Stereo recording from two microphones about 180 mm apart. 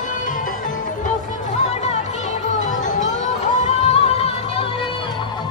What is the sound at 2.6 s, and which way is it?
Music, 45° left (ahead or behind).